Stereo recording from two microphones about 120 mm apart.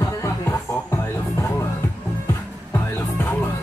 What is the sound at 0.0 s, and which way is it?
Music, 25° left (ahead or behind).